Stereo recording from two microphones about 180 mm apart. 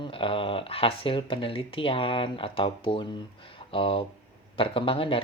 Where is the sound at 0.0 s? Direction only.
30° left (ahead or behind).